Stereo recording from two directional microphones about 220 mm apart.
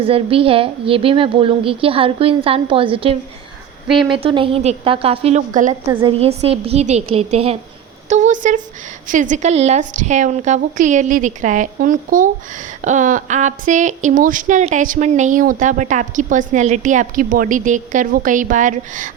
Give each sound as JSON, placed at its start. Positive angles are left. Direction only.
{"t": 0.0, "sound": "a woman's voice", "side_deg": -25}